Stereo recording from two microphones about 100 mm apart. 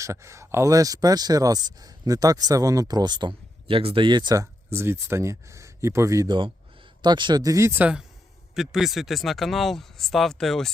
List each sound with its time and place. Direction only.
0.0 s speech: 30° right (ahead or behind); by 4.4 s 50° right (ahead or behind)
4.4 s speech: 25° right (ahead or behind)
6.2 s a man's voice: 50° right (ahead or behind)
7.4 s speech: 30° right (ahead or behind)
7.8 s speech: 10° right (ahead or behind)